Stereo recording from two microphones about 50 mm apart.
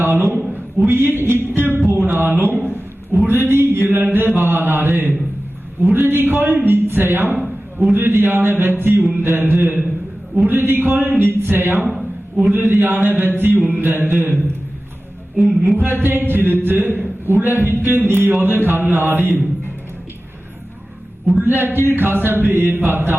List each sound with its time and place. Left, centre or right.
0.0 s a man's voice: right
15.8 s a man's voice: right
21.3 s a man's voice: right